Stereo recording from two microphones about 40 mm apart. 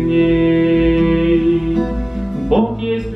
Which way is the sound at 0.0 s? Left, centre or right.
Centre.